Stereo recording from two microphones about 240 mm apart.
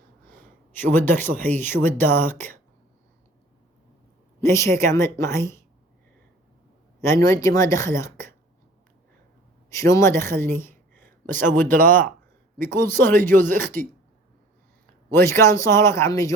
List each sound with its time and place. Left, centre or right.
0.7 s speech: centre
4.4 s speech: centre
7.1 s speech: centre
9.7 s a woman's voice: centre
11.5 s speech: right
11.9 s speech: centre
15.1 s speech: centre